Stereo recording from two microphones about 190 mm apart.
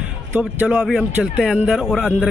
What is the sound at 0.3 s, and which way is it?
A man's voice, 10° right (ahead or behind).